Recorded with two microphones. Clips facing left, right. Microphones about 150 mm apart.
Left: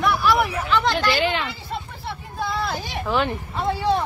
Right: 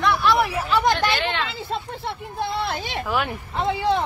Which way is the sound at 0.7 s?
15° right (ahead or behind).